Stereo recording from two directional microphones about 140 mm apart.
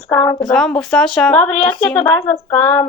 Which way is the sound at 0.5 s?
5° left (ahead or behind).